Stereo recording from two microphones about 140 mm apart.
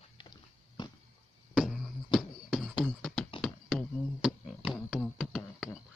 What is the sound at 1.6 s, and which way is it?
Beatboxing, centre (ahead or behind).